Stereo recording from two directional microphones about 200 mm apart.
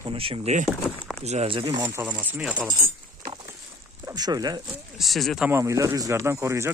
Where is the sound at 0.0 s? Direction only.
25° right (ahead or behind).